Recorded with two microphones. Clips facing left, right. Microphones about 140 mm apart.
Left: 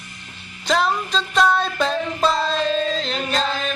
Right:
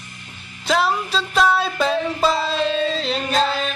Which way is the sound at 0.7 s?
5° right (ahead or behind).